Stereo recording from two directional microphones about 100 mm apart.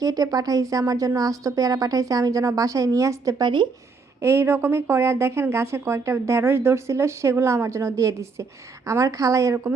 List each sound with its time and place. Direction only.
0.0 s speech: 40° right (ahead or behind)
3.4 s speech: 50° right (ahead or behind)
4.2 s speech: 25° right (ahead or behind)